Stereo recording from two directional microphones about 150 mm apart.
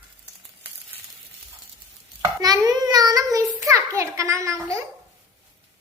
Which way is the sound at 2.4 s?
25° right (ahead or behind).